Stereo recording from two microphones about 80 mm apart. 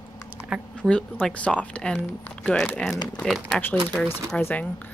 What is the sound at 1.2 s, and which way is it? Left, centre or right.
Speech, centre.